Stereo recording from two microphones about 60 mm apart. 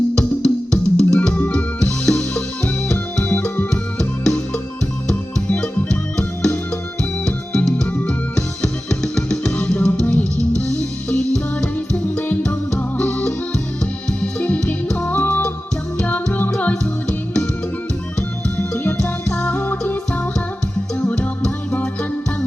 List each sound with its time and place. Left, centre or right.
0.1 s music: centre
3.7 s music: centre
7.7 s music: left
19.0 s music: left
21.0 s music: left